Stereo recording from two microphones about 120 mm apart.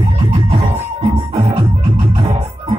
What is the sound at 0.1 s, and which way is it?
Music, 55° right (ahead or behind).